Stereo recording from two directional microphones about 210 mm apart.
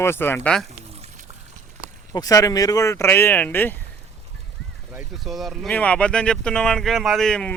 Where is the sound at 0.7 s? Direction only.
30° right (ahead or behind).